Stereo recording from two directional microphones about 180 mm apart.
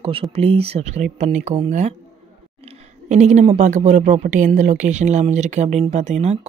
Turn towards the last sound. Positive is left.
turn(degrees=-35)  # may be behind; listen again after turning